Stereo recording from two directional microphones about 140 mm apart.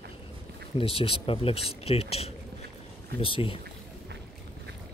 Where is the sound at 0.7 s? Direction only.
45° left (ahead or behind).